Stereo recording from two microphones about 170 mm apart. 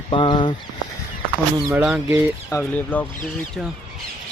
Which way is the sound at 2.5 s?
10° left (ahead or behind).